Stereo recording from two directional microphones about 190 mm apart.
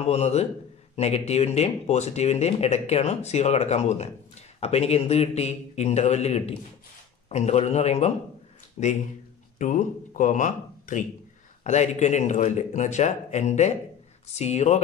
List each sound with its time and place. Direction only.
0.0 s speech: 35° left (ahead or behind)